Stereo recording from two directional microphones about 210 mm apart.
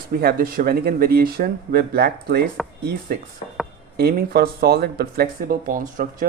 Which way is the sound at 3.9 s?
50° right (ahead or behind).